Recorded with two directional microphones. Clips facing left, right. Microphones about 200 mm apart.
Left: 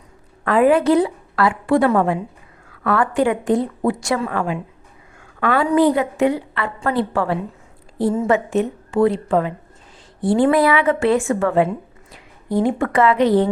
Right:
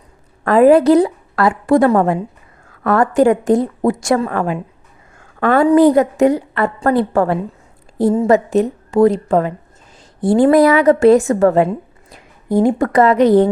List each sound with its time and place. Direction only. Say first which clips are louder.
0.4 s a woman's voice: right 5 dB; 40° right (ahead or behind)